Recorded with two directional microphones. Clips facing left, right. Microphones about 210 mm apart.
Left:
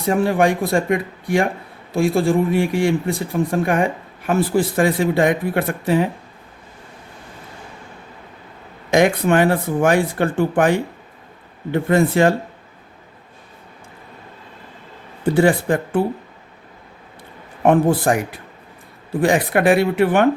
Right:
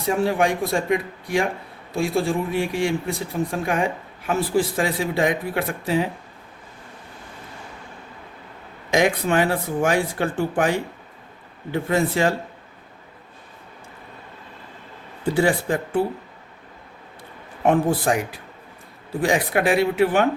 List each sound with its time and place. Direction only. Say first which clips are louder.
0.1 s speech: left 4 dB; 55° left (ahead or behind)
8.9 s speech: left 4 dB; 55° left (ahead or behind)
15.4 s speech: left 5 dB; 55° left (ahead or behind)
17.7 s speech: left 4 dB; 55° left (ahead or behind)
19.2 s speech: left 4 dB; 55° left (ahead or behind)